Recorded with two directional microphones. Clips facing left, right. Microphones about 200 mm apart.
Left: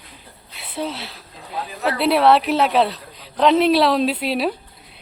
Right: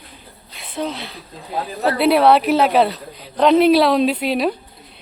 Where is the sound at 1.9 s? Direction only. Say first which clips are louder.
Right 2 dB; centre (ahead or behind).